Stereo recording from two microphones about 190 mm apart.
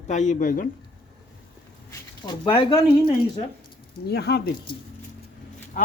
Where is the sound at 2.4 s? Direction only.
25° left (ahead or behind).